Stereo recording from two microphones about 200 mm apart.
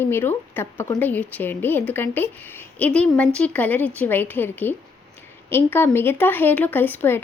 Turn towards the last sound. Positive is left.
turn(degrees=10)  # may be behind; listen again after turning